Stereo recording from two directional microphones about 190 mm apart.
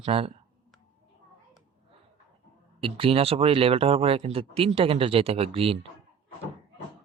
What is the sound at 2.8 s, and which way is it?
Speech, 30° right (ahead or behind).